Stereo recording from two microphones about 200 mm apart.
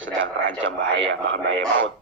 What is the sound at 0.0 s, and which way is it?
Speech, 70° right (ahead or behind).